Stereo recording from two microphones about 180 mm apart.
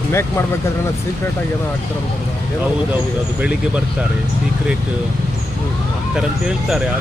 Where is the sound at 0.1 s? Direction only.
15° left (ahead or behind).